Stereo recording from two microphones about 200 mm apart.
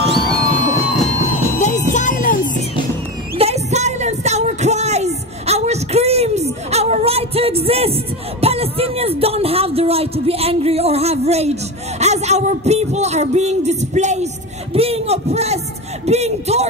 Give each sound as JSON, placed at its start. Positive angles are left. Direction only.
{"t": 0.1, "sound": "music", "side_deg": -45}
{"t": 1.6, "sound": "music", "side_deg": 35}
{"t": 3.3, "sound": "music", "side_deg": -30}
{"t": 12.0, "sound": "a sound", "side_deg": -35}